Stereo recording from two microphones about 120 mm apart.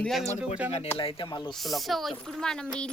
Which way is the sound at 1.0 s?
45° left (ahead or behind).